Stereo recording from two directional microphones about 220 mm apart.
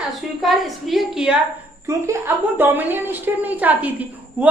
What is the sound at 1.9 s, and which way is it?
A woman's voice, 15° right (ahead or behind).